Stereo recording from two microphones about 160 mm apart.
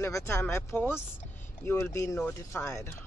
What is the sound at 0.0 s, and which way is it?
Speech, 20° left (ahead or behind).